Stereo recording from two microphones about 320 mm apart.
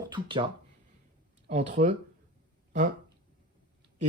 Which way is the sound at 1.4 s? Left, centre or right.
Right.